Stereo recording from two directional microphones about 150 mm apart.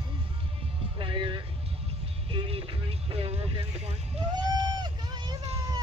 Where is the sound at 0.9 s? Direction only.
30° right (ahead or behind).